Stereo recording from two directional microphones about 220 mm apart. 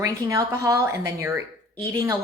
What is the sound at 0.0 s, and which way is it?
Speech, 15° right (ahead or behind).